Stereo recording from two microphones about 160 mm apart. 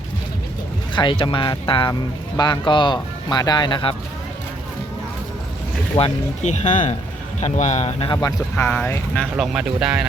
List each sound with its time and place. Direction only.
0.9 s speech: 30° left (ahead or behind)
6.0 s speech: 45° left (ahead or behind); by 8.3 s 30° left (ahead or behind)
8.5 s speech: 10° left (ahead or behind)